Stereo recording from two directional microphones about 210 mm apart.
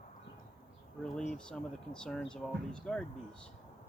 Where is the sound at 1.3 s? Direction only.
5° left (ahead or behind).